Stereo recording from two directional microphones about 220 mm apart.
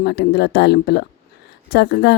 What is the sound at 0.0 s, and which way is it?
A woman's voice, 50° left (ahead or behind).